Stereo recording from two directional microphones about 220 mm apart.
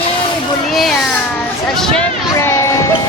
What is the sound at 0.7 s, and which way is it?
Speech, centre (ahead or behind).